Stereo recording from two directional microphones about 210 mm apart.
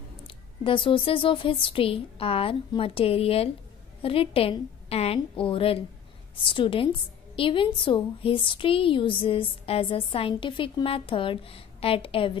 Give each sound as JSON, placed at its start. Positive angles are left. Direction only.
{"t": 0.7, "sound": "a woman's voice", "side_deg": 25}